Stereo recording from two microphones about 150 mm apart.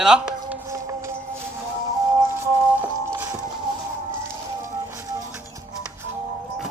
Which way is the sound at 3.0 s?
20° right (ahead or behind).